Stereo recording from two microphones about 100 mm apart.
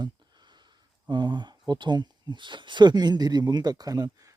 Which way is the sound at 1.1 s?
50° right (ahead or behind).